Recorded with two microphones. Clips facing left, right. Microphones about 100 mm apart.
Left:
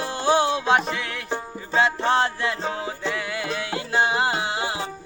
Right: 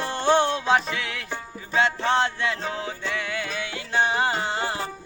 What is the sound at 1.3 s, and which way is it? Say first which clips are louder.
Music: left 4 dB; 20° left (ahead or behind).